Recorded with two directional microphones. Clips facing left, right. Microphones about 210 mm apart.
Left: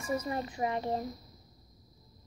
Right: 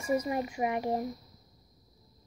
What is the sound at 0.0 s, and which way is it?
Speech, 10° right (ahead or behind).